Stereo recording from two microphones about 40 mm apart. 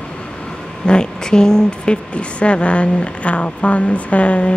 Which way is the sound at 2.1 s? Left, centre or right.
Left.